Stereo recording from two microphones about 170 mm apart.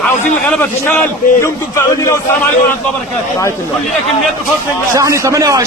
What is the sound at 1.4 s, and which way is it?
Speech, 15° left (ahead or behind).